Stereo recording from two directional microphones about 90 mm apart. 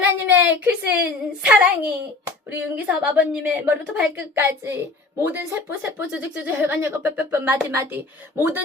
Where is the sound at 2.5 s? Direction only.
15° right (ahead or behind).